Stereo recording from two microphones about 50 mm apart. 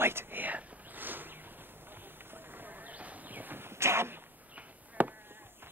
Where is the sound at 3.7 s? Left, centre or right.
Right.